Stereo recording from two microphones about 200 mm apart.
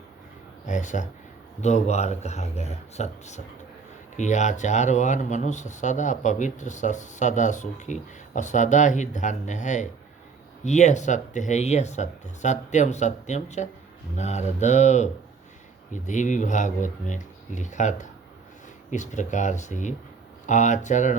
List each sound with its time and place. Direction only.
0.6 s speech: 40° left (ahead or behind)